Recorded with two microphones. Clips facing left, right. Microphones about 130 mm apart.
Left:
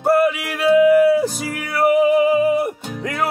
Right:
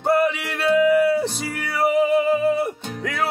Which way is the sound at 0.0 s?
5° left (ahead or behind).